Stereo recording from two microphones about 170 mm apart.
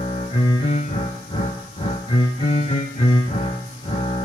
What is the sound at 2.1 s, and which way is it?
Music, 35° left (ahead or behind).